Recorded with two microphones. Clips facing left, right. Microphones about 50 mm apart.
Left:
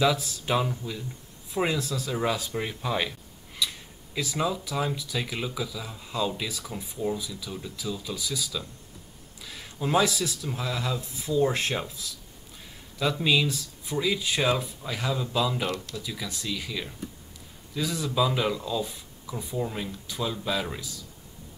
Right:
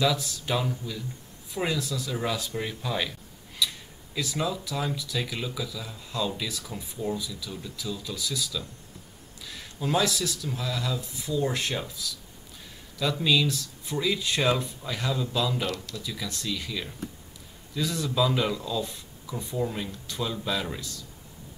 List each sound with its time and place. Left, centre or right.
0.0 s speech: left
1.8 s speech: left
2.3 s speech: centre
13.0 s speech: centre
13.8 s speech: centre
15.6 s speech: left